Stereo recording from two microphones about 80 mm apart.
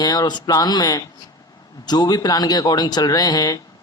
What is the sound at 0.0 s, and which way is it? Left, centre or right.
Speech, left.